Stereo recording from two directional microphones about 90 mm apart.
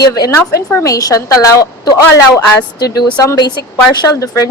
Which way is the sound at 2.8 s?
50° left (ahead or behind).